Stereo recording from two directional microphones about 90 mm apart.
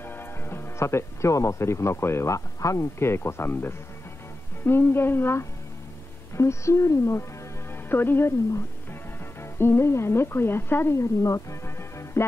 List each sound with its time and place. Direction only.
0.0 s a woman's voice: 25° left (ahead or behind)